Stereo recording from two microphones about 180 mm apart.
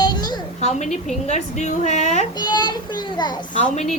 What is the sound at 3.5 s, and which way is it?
Speech, 40° left (ahead or behind).